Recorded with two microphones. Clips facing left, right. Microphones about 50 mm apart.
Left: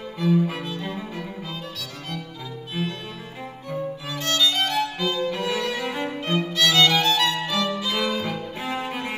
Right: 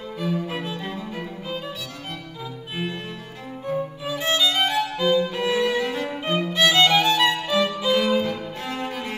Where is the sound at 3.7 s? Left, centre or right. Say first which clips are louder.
Right 3 dB; centre.